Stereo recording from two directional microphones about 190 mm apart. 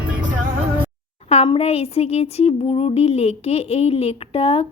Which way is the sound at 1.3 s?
35° left (ahead or behind).